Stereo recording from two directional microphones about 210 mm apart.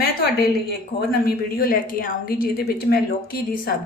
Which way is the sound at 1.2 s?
45° left (ahead or behind).